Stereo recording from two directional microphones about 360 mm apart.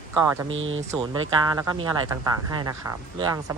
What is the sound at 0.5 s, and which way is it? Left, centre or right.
Speech, right.